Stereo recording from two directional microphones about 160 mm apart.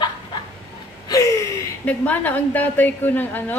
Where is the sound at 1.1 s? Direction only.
20° left (ahead or behind).